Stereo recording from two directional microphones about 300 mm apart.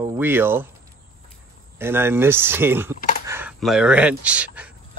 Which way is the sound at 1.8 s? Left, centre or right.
Centre.